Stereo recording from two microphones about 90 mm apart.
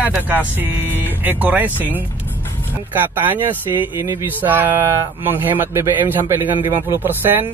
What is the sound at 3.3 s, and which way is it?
Speech, 20° right (ahead or behind).